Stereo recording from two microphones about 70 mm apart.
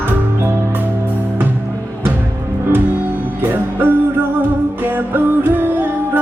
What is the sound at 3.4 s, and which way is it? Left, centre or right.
Music, right.